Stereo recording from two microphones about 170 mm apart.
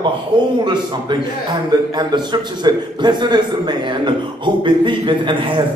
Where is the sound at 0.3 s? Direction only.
30° right (ahead or behind).